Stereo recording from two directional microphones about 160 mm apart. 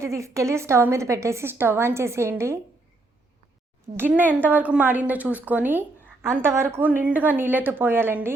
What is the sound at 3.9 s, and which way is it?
Speech, 10° right (ahead or behind).